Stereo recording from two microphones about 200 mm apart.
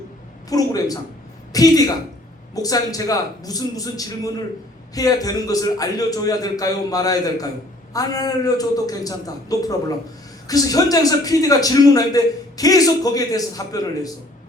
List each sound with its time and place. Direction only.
0.5 s a man's voice: 20° left (ahead or behind)